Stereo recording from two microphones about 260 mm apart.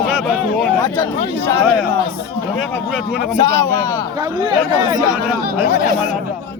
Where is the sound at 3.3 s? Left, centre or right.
Centre.